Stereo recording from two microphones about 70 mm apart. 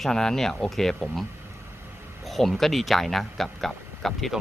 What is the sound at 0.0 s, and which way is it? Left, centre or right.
Speech, centre.